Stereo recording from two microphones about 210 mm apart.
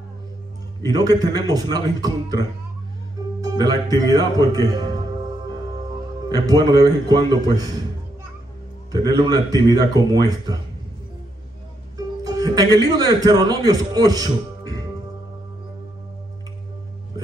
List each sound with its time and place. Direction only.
0.8 s a man's voice: 20° right (ahead or behind)
6.2 s speech: 20° right (ahead or behind)
8.9 s speech: 20° right (ahead or behind)
12.2 s a man's voice: 15° right (ahead or behind)